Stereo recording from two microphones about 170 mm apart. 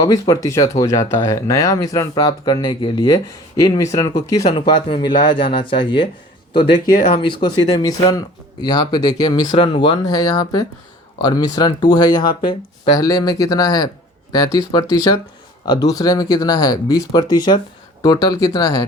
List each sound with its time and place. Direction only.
0.0 s speech: 20° left (ahead or behind)
6.8 s speech: 55° left (ahead or behind)
7.1 s speech: 30° left (ahead or behind)